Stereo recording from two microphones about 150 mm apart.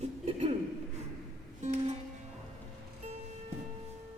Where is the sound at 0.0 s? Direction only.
45° right (ahead or behind).